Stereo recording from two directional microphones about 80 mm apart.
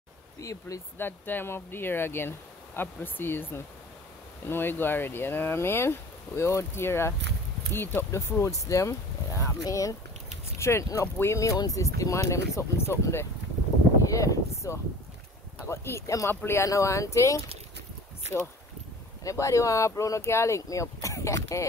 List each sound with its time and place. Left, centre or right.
0.4 s speech: left
0.9 s speech: left
14.0 s a sound: left
15.7 s speech: left
19.2 s speech: left